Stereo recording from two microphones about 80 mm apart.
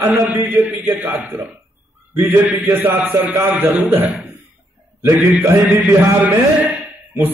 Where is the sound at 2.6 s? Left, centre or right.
Right.